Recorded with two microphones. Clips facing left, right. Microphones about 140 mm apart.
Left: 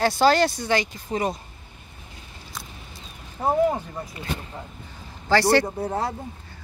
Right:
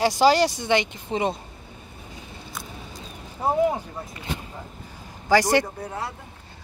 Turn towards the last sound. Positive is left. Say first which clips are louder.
# left 6 dB
turn(degrees=35)  # may be behind; listen again after turning